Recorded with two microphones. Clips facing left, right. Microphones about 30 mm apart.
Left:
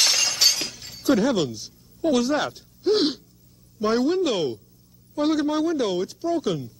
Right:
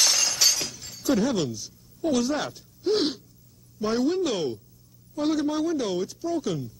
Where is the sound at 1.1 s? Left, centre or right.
Centre.